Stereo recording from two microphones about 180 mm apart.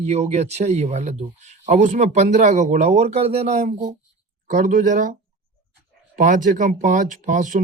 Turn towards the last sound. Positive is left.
turn(degrees=-45)  # may be behind; listen again after turning